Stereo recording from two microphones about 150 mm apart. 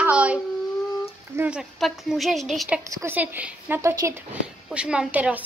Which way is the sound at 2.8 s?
20° right (ahead or behind).